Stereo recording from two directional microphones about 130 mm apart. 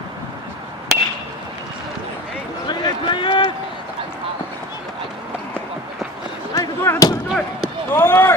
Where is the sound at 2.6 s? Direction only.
40° left (ahead or behind).